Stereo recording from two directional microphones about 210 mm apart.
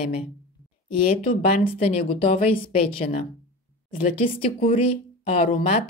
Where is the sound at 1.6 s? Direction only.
25° left (ahead or behind).